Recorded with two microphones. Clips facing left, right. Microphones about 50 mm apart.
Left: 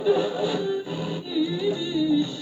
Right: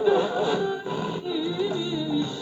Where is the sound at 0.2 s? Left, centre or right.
Right.